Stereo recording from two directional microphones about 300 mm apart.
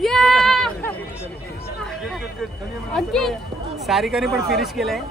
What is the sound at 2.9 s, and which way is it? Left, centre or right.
Speech, centre.